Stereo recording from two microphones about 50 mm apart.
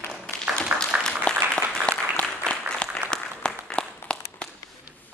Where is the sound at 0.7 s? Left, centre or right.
Right.